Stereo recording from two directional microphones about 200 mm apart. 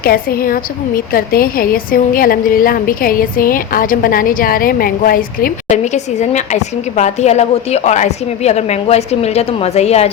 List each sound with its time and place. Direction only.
0.0 s a woman's voice: 50° left (ahead or behind); by 10.1 s 30° left (ahead or behind)